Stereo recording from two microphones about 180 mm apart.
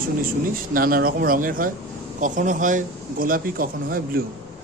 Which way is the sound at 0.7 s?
55° right (ahead or behind).